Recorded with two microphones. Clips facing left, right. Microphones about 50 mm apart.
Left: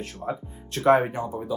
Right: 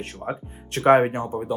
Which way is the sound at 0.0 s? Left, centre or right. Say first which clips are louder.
Right 1 dB; right.